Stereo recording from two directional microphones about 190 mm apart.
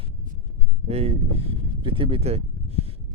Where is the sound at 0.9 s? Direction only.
35° right (ahead or behind).